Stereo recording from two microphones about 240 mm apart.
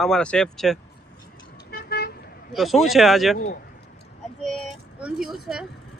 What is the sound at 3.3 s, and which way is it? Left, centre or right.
Speech, left.